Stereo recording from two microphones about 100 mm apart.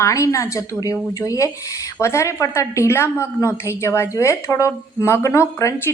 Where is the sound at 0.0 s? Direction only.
30° left (ahead or behind).